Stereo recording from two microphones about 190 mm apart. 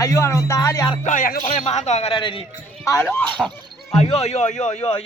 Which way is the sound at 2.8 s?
15° left (ahead or behind).